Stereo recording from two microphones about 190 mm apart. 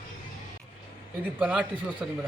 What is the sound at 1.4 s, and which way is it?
Speech, 5° right (ahead or behind).